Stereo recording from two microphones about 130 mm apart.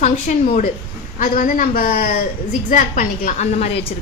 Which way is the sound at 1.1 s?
90° left.